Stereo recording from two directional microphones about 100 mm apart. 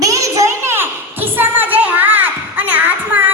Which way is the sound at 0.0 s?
35° right (ahead or behind).